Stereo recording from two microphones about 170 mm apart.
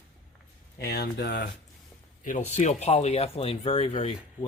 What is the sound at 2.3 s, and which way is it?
Speech, 45° left (ahead or behind).